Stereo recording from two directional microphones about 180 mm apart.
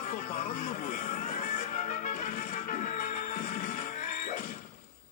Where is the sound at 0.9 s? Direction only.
40° left (ahead or behind).